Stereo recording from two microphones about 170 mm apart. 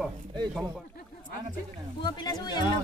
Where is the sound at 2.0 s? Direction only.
25° left (ahead or behind).